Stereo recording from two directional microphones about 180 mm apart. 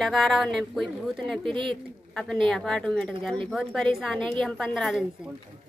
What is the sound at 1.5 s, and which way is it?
Speech, 30° right (ahead or behind).